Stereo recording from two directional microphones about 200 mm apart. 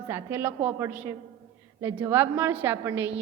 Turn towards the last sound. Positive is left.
turn(degrees=-10)  # may be behind; listen again after turning